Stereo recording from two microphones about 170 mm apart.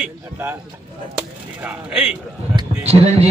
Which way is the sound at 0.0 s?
10° right (ahead or behind).